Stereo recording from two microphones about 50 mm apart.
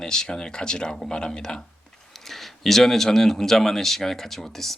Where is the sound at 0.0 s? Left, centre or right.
Centre.